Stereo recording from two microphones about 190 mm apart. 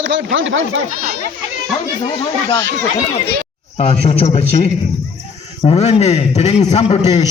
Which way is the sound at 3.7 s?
30° left (ahead or behind).